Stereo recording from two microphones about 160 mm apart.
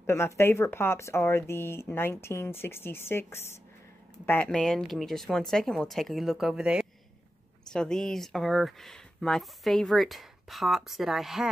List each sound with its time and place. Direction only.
0.0 s speech: 15° left (ahead or behind); by 11.4 s centre (ahead or behind)